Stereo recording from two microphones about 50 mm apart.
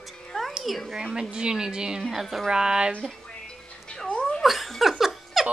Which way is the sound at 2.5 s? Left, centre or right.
Centre.